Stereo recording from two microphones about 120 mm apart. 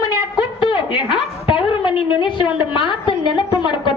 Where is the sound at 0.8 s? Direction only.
45° left (ahead or behind).